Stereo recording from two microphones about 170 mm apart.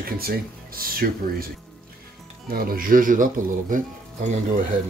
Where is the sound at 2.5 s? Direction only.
60° right (ahead or behind).